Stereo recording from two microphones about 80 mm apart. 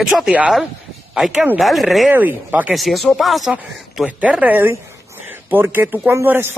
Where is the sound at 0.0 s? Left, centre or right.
Centre.